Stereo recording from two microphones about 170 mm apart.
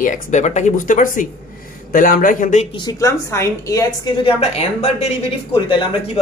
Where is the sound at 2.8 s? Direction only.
20° left (ahead or behind).